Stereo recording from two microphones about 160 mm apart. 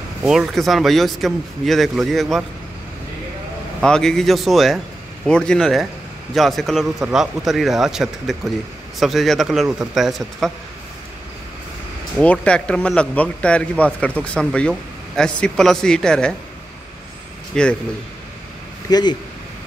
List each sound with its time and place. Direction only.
0.2 s speech: 5° right (ahead or behind)
3.8 s speech: 5° left (ahead or behind)
12.2 s speech: 5° left (ahead or behind)
17.5 s speech: 5° left (ahead or behind)
18.9 s speech: 25° left (ahead or behind)